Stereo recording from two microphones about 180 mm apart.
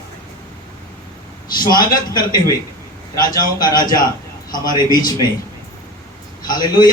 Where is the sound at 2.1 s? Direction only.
20° left (ahead or behind).